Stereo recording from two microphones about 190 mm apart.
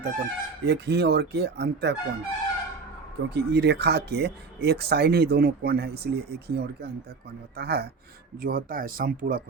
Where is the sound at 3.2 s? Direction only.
60° right (ahead or behind).